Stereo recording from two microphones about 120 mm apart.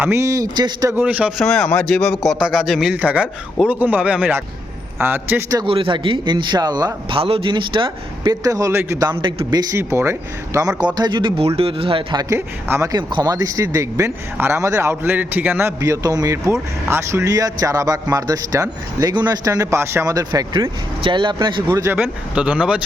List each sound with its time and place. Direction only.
0.0 s speech: 20° right (ahead or behind)
0.9 s speech: 10° right (ahead or behind)
1.4 s a man's voice: 5° left (ahead or behind); by 5.4 s 15° right (ahead or behind)
5.6 s speech: 45° right (ahead or behind)
7.2 s speech: 50° right (ahead or behind)
8.4 s speech: 30° right (ahead or behind)
9.1 s speech: 50° right (ahead or behind)
9.5 s speech: 30° right (ahead or behind); by 12.2 s 45° right (ahead or behind)
12.3 s speech: 20° right (ahead or behind)
13.0 s speech: 40° right (ahead or behind)
21.9 s speech: 15° right (ahead or behind)